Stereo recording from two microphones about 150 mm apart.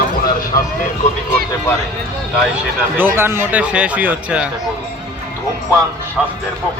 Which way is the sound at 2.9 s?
15° right (ahead or behind).